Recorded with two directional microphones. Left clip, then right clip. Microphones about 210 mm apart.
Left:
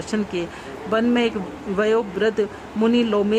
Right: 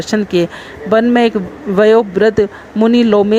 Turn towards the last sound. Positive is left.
turn(degrees=-30)  # may be behind; listen again after turning